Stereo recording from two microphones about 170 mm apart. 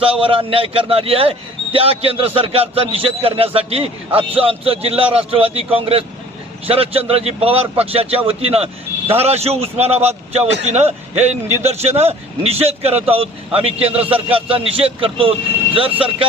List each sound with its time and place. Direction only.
0.2 s a man's voice: 30° right (ahead or behind)